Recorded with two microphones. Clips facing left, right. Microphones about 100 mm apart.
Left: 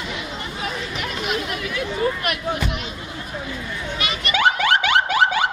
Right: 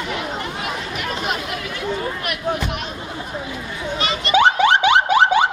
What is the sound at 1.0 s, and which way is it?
Chatter, 40° right (ahead or behind).